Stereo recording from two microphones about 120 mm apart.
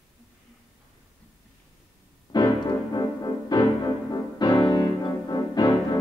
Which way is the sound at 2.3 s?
35° left (ahead or behind).